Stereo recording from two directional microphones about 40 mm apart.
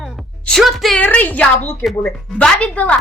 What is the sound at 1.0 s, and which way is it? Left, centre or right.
Speech, left.